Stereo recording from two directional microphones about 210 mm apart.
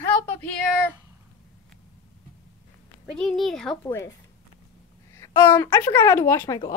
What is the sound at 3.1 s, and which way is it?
Speech, centre (ahead or behind).